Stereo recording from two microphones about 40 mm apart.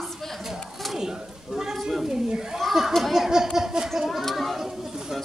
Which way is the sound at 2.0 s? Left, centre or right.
Centre.